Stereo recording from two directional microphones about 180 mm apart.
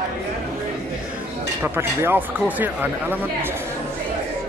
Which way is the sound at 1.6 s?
10° right (ahead or behind).